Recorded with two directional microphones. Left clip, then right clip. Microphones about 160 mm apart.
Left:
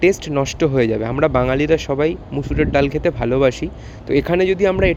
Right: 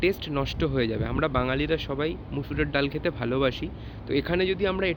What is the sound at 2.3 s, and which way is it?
Speech, 30° left (ahead or behind).